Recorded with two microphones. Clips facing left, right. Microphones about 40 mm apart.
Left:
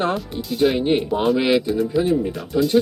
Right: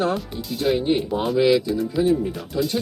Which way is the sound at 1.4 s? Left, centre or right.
Left.